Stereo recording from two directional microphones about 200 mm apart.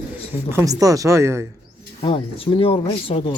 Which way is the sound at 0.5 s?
15° right (ahead or behind).